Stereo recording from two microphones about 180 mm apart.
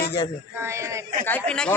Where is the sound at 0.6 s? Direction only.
15° right (ahead or behind).